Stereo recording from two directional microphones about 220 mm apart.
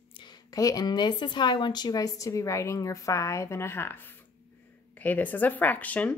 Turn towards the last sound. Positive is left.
turn(degrees=5)  # may be behind; listen again after turning